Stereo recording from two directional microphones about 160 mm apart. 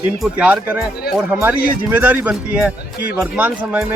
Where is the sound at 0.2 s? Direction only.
5° right (ahead or behind).